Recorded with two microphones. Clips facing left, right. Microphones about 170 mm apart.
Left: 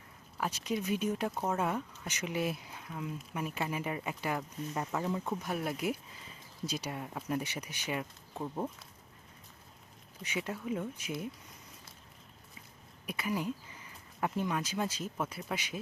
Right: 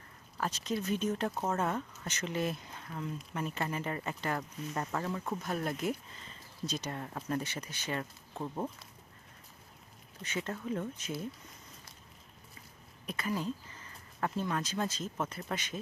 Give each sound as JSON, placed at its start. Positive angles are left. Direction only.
{"t": 0.3, "sound": "speech", "side_deg": 10}
{"t": 10.2, "sound": "speech", "side_deg": 10}
{"t": 13.1, "sound": "speech", "side_deg": 10}